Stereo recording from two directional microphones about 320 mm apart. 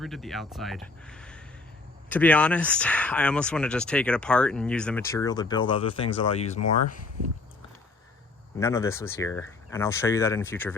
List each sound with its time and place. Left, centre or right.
0.0 s speech: centre
8.5 s speech: centre